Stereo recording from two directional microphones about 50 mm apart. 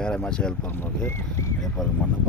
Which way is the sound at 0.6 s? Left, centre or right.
Left.